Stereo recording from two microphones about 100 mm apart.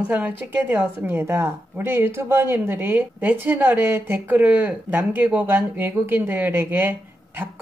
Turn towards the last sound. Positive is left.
turn(degrees=-20)  # may be behind; listen again after turning